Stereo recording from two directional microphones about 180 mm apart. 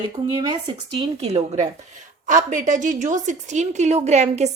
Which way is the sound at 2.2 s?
45° right (ahead or behind).